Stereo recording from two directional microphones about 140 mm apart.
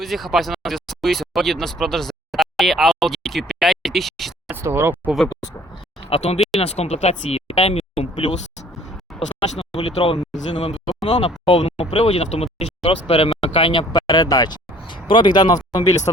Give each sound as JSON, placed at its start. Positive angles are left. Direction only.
{"t": 0.0, "sound": "speech", "side_deg": 0}
{"t": 4.5, "sound": "speech", "side_deg": -15}
{"t": 6.1, "sound": "speech", "side_deg": 45}
{"t": 9.4, "sound": "speech", "side_deg": 40}